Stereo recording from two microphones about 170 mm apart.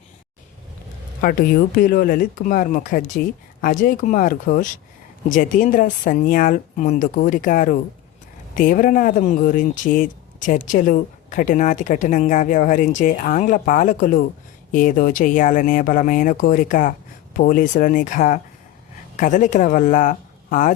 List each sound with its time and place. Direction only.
1.2 s a woman's voice: 60° left (ahead or behind)